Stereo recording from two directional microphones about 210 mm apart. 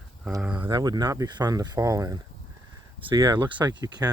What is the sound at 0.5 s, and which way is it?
Speech, 20° right (ahead or behind).